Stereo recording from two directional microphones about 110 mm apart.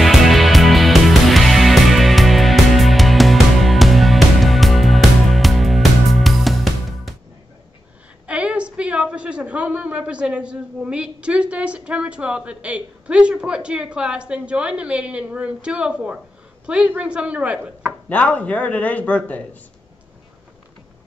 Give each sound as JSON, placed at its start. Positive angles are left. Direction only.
{"t": 0.0, "sound": "music", "side_deg": 0}
{"t": 8.3, "sound": "a woman's voice", "side_deg": -10}
{"t": 18.0, "sound": "a man's voice", "side_deg": 10}